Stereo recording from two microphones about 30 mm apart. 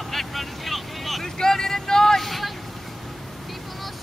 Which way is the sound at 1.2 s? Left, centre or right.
Centre.